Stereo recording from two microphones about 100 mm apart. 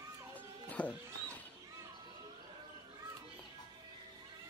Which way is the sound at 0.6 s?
15° left (ahead or behind).